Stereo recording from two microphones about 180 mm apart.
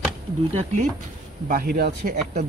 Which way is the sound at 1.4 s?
55° right (ahead or behind).